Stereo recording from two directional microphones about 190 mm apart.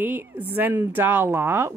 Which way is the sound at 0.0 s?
10° right (ahead or behind).